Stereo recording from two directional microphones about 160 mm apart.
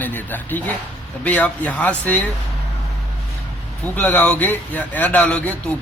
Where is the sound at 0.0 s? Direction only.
10° left (ahead or behind).